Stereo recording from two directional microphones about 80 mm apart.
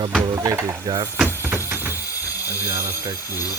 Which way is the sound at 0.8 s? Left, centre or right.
Right.